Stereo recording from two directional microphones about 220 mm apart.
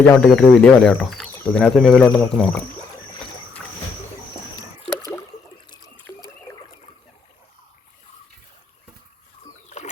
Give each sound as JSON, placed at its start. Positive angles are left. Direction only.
{"t": 0.0, "sound": "speech", "side_deg": 5}
{"t": 5.8, "sound": "a sound", "side_deg": 0}
{"t": 9.6, "sound": "boat", "side_deg": 30}